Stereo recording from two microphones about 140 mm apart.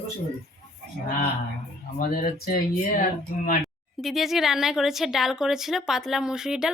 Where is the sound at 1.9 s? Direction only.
90° left.